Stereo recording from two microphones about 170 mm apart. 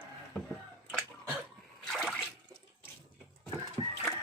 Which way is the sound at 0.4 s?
5° left (ahead or behind).